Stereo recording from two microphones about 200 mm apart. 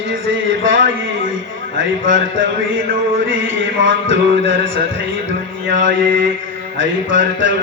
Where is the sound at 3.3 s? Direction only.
70° right (ahead or behind).